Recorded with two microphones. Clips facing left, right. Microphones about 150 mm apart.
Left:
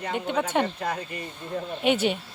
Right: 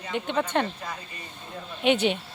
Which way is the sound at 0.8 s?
65° left (ahead or behind).